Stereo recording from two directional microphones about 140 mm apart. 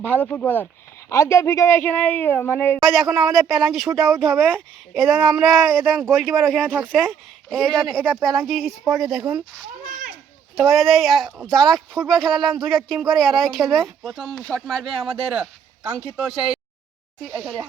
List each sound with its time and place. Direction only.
0.0 s a woman's voice: 15° left (ahead or behind); by 9.2 s 5° right (ahead or behind)
10.5 s speech: centre (ahead or behind)